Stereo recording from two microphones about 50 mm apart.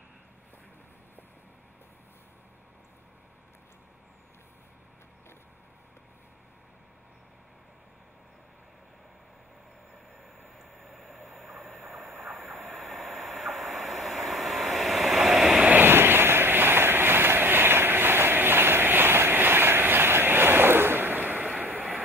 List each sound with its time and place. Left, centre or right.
10.8 s vehicle: centre
12.2 s train: centre
15.6 s vehicle: right
15.9 s vehicle: right
21.6 s vehicle: right